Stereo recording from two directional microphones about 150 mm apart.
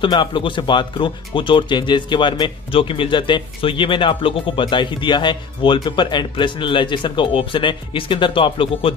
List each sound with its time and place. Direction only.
0.0 s speech: 30° left (ahead or behind)